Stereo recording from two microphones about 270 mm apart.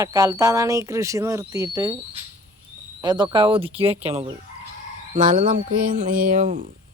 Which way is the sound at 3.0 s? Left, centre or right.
Centre.